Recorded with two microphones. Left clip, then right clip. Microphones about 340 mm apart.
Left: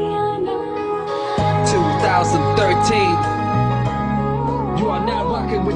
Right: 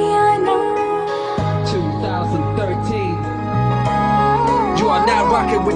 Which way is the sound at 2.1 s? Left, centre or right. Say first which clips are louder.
Left 5 dB; left.